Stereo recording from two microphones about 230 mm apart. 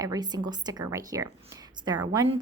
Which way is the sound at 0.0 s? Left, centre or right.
Centre.